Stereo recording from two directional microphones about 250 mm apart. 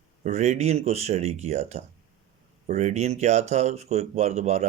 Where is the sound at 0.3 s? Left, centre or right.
Right.